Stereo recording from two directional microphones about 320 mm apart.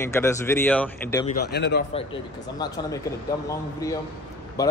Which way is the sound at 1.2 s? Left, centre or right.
Left.